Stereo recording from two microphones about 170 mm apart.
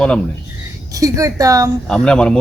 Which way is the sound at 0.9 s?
20° right (ahead or behind).